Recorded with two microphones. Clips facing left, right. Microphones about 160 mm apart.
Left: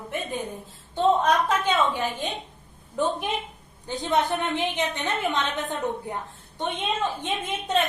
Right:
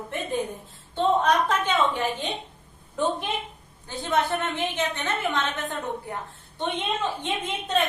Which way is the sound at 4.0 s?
15° left (ahead or behind).